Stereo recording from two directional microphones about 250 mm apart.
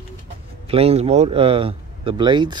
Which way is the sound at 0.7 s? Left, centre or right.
Right.